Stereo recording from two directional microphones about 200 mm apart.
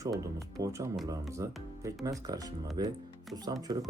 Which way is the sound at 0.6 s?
15° right (ahead or behind).